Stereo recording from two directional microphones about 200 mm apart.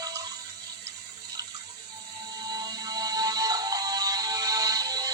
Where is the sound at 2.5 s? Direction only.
20° right (ahead or behind).